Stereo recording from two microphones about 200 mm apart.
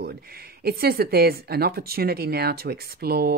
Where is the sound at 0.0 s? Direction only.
50° right (ahead or behind).